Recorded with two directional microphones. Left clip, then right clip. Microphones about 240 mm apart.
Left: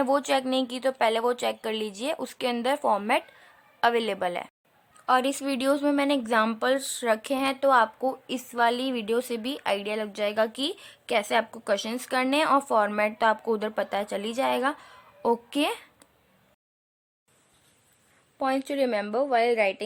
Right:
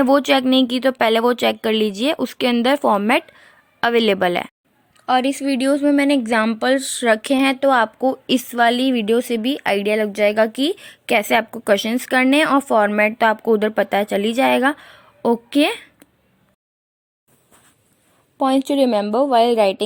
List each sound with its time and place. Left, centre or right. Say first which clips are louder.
0.0 s speech: right 9 dB; right
5.0 s speech: right 6 dB; centre
18.4 s a woman's voice: right 9 dB; right